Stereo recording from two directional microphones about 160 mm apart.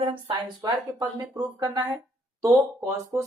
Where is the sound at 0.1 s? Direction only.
30° right (ahead or behind).